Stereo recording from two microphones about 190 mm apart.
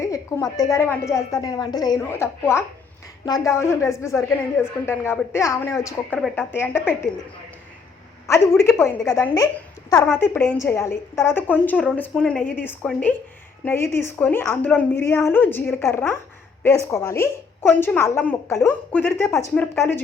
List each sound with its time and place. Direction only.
0.0 s a woman's voice: 15° left (ahead or behind)
8.3 s a woman's voice: 15° left (ahead or behind)